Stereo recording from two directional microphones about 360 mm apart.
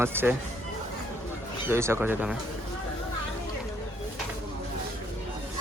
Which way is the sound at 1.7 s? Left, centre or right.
Centre.